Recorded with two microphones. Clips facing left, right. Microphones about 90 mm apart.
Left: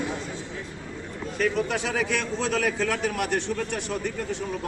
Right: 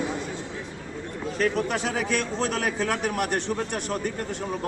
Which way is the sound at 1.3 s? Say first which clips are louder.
Even; 45° right (ahead or behind).